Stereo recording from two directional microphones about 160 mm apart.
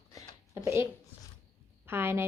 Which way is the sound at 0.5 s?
15° right (ahead or behind).